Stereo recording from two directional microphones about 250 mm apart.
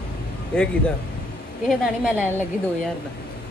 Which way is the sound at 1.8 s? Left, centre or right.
Centre.